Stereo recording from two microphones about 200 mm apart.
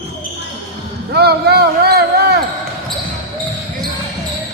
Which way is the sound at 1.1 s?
55° right (ahead or behind).